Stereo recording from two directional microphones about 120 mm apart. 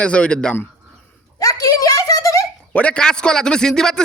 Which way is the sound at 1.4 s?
30° left (ahead or behind).